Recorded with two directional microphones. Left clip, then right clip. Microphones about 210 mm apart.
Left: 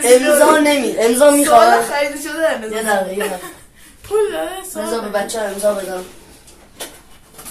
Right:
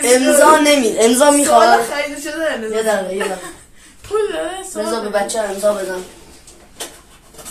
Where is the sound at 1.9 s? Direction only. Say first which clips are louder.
Left 2 dB; 25° left (ahead or behind).